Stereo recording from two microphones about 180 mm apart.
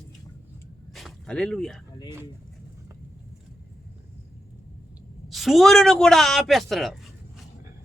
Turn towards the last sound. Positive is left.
turn(degrees=0)  # may be behind; listen again after turning